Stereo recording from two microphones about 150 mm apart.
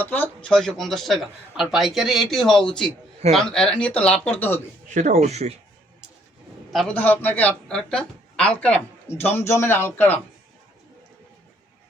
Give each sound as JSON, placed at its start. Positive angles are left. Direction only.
{"t": 0.0, "sound": "a man's voice", "side_deg": 10}
{"t": 4.9, "sound": "speech", "side_deg": -55}
{"t": 6.7, "sound": "speech", "side_deg": 10}